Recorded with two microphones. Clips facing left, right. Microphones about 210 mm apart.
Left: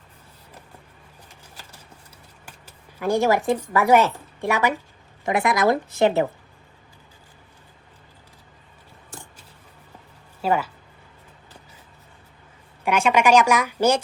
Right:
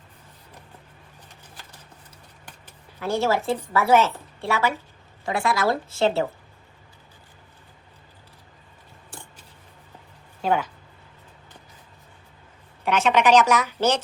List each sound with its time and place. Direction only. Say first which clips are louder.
2.5 s a woman's voice: left 1 dB; 10° left (ahead or behind)
10.4 s speech: left 1 dB; 5° left (ahead or behind)
12.8 s a woman's voice: left 1 dB; 10° left (ahead or behind)